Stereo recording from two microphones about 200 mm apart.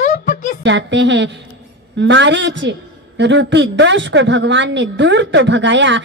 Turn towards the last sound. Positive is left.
turn(degrees=-65)  # may be behind; listen again after turning